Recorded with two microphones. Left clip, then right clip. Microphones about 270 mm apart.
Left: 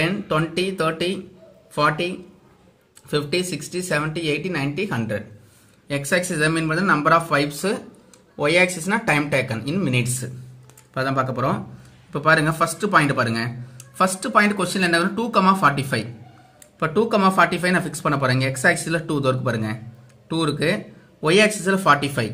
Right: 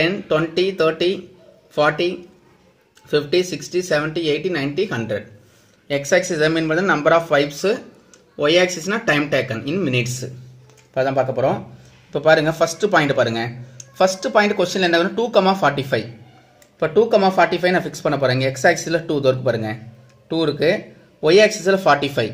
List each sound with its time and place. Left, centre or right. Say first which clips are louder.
0.0 s speech: right 4 dB; centre
3.1 s speech: right 5 dB; centre
8.8 s speech: right 2 dB; centre